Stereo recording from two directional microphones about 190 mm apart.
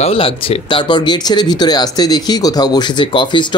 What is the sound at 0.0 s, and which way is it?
Speech, 30° left (ahead or behind).